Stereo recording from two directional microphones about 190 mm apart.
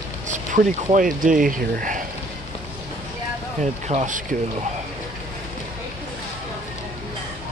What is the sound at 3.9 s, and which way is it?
Speech, 40° right (ahead or behind).